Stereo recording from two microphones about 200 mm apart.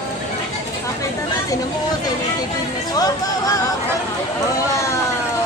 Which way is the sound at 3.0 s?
20° left (ahead or behind).